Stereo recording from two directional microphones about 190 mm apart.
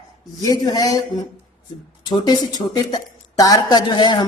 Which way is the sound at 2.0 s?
20° left (ahead or behind).